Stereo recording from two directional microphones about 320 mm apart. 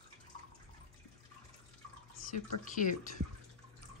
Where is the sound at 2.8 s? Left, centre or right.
Left.